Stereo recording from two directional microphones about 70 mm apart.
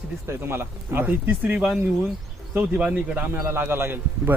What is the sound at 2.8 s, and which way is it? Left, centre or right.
Speech, centre.